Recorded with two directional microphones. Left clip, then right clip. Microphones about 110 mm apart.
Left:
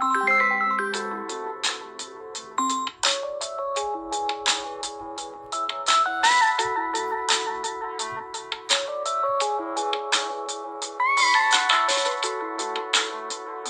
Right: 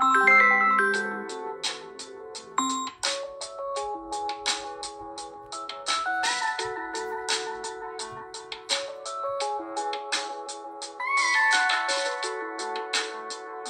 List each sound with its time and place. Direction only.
0.0 s music: centre (ahead or behind)
2.5 s music: centre (ahead or behind)
2.8 s music: 40° left (ahead or behind)